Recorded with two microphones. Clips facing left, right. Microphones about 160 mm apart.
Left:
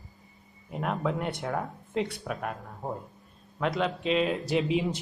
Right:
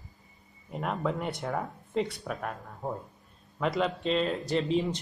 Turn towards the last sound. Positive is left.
turn(degrees=10)  # may be behind; listen again after turning